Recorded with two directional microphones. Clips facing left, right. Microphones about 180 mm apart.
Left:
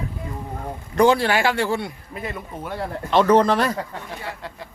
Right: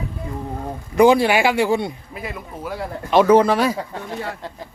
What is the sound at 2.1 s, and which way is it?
Speech, 5° right (ahead or behind).